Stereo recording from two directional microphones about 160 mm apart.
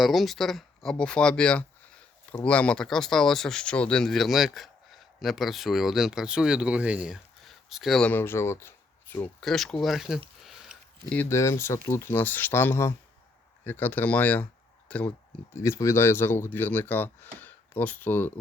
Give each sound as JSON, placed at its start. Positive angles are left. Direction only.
{"t": 0.0, "sound": "speech", "side_deg": 0}
{"t": 9.4, "sound": "speech", "side_deg": 0}
{"t": 10.4, "sound": "a sound", "side_deg": 0}
{"t": 11.2, "sound": "speech", "side_deg": 15}